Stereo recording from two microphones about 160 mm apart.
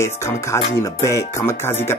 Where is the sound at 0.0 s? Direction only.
15° left (ahead or behind).